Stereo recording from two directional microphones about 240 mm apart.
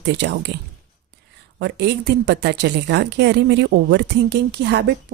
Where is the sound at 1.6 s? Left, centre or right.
Right.